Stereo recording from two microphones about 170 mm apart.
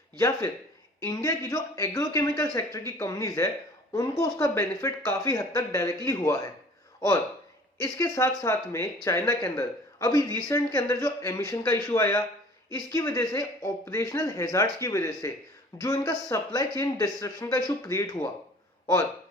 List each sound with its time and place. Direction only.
0.2 s speech: 15° left (ahead or behind)
7.9 s speech: 15° left (ahead or behind)